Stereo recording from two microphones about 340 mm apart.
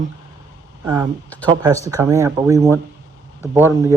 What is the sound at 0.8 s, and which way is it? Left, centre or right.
Speech, centre.